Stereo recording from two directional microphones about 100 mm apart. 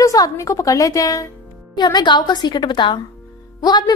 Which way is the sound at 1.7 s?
45° left (ahead or behind).